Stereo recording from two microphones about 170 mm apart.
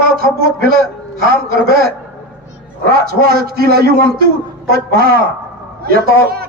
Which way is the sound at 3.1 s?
65° right (ahead or behind).